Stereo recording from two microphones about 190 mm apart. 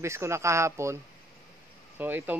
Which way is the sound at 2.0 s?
10° right (ahead or behind).